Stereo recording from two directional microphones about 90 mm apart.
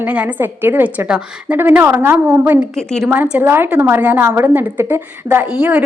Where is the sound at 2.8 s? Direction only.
5° left (ahead or behind).